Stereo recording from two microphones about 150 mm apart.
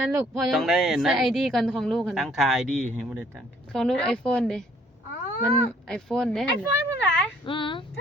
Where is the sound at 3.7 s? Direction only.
5° left (ahead or behind).